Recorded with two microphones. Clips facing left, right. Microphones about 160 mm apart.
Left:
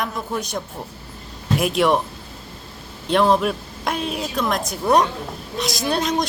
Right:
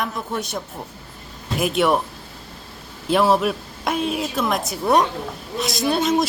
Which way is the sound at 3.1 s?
5° right (ahead or behind).